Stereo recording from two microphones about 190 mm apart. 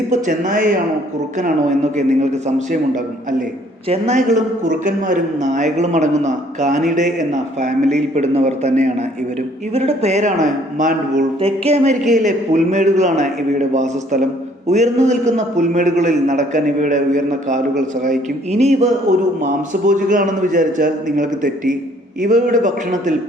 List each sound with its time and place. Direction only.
0.1 s a man's voice: 40° right (ahead or behind)